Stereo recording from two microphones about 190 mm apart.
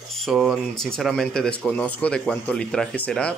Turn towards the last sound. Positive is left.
turn(degrees=5)  # may be behind; listen again after turning